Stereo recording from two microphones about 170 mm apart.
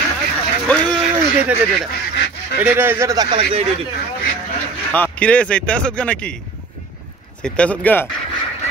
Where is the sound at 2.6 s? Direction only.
10° right (ahead or behind); by 3.6 s 25° right (ahead or behind).